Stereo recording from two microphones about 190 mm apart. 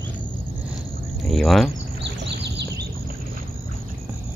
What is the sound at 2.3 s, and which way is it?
Bird, 65° right (ahead or behind).